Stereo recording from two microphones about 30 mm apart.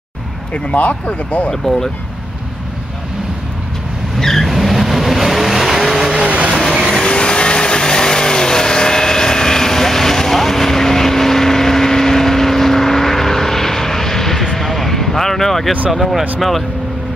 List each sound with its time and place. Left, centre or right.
0.7 s speech: left
4.2 s vehicle: centre
4.5 s vehicle: centre
6.2 s vehicle: right
6.9 s vehicle: left; by 15.7 s centre
15.9 s speech: centre